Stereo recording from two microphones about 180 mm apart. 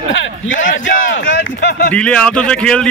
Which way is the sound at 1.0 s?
90° left.